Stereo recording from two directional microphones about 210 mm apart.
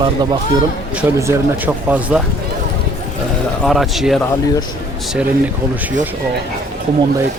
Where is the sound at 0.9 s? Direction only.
10° right (ahead or behind).